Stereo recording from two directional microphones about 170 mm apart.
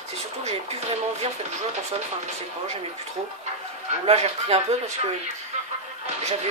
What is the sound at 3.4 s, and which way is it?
Speech, 40° right (ahead or behind).